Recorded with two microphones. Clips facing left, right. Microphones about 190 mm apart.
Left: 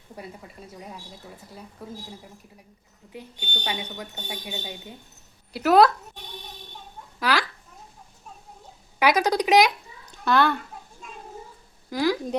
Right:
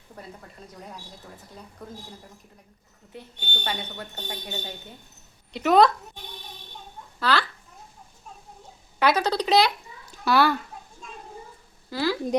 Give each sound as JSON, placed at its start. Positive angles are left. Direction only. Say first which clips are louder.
{"t": 0.2, "sound": "speech", "louder": "left 2 dB", "side_deg": 5}
{"t": 3.1, "sound": "speech", "louder": "left 1 dB", "side_deg": 10}
{"t": 7.2, "sound": "speech", "louder": "even", "side_deg": 10}
{"t": 9.0, "sound": "speech", "louder": "left 1 dB", "side_deg": 10}
{"t": 10.1, "sound": "a sound", "louder": "even", "side_deg": -5}
{"t": 11.9, "sound": "a woman's voice", "louder": "left 3 dB", "side_deg": 15}